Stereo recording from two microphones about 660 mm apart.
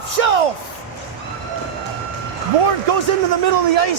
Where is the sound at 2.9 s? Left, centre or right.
Right.